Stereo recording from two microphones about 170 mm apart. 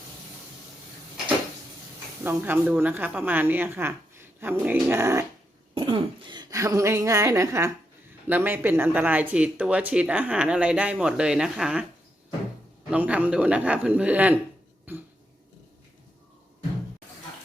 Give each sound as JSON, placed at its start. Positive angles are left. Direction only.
{"t": 2.2, "sound": "speech", "side_deg": -10}
{"t": 5.7, "sound": "speech", "side_deg": -30}
{"t": 12.9, "sound": "speech", "side_deg": -10}
{"t": 14.9, "sound": "cough", "side_deg": -10}